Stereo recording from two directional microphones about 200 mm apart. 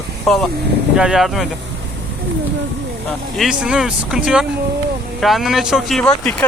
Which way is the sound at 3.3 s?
Centre (ahead or behind).